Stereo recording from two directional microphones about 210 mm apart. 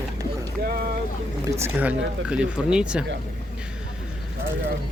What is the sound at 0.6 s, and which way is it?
Speech, 45° right (ahead or behind).